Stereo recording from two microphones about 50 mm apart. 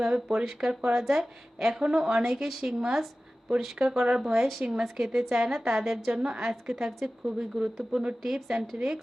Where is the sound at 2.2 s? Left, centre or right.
Centre.